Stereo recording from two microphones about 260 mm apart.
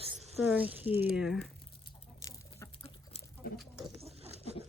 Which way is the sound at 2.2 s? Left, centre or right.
Centre.